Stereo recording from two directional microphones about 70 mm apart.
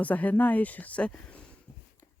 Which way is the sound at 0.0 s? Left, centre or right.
Left.